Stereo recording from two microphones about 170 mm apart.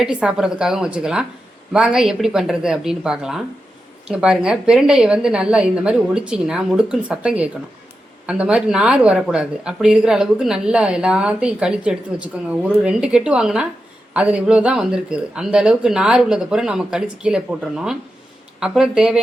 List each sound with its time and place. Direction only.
0.0 s speech: 5° right (ahead or behind)